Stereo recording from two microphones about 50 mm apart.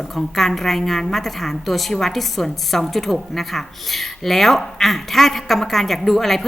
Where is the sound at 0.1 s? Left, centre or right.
Centre.